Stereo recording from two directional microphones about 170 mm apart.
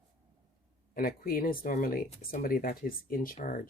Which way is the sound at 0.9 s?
60° left (ahead or behind).